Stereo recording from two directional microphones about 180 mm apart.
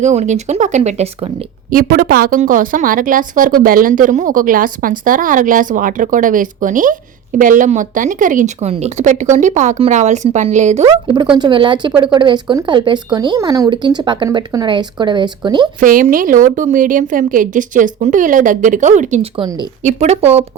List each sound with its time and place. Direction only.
0.0 s speech: 40° right (ahead or behind)
1.7 s a woman's voice: 55° right (ahead or behind)
10.8 s speech: 25° right (ahead or behind)
15.8 s a woman's voice: 50° right (ahead or behind)